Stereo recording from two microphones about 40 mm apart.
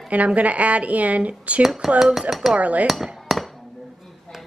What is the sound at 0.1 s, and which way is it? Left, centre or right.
A woman's voice, right.